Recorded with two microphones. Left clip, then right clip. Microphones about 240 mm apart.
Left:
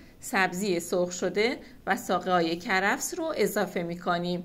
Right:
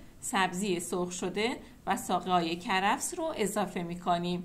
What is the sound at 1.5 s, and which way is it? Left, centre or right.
Speech, right.